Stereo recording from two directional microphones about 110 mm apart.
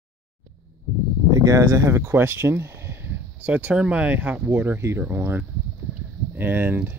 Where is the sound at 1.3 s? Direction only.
35° right (ahead or behind).